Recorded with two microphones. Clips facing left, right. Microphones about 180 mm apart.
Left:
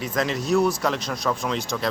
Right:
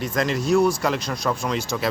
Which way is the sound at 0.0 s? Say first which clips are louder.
Right 2 dB; centre (ahead or behind).